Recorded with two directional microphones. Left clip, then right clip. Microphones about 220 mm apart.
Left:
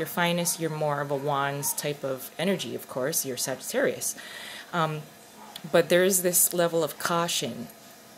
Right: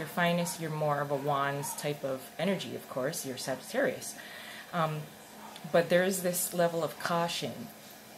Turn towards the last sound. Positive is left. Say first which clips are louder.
# left 4 dB
turn(degrees=50)  # may be behind; listen again after turning